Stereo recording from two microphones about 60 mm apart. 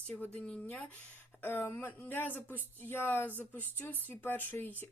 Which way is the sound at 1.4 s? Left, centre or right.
Left.